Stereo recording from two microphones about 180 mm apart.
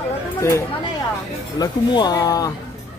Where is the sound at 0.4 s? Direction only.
15° left (ahead or behind).